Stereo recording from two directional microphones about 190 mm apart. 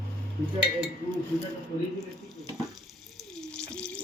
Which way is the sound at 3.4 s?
5° left (ahead or behind).